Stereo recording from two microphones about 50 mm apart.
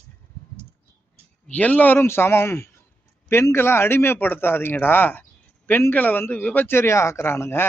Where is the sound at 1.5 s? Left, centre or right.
Left.